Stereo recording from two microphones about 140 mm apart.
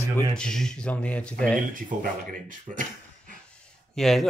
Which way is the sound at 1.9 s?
65° right (ahead or behind).